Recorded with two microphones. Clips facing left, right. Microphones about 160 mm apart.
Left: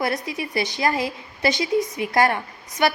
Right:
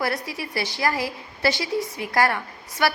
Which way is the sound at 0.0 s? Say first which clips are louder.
Left 2 dB; 20° left (ahead or behind).